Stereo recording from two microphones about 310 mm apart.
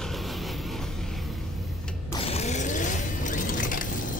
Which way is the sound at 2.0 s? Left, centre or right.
Centre.